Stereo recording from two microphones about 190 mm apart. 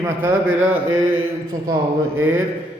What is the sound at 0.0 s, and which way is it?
Speech, 10° right (ahead or behind).